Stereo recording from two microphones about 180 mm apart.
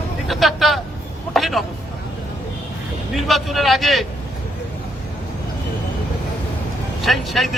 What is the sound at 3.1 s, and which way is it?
Speech, centre (ahead or behind).